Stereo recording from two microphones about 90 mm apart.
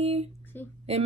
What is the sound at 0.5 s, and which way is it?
Speech, 20° left (ahead or behind).